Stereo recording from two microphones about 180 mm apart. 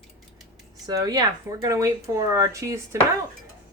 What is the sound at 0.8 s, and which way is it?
Speech, 20° right (ahead or behind).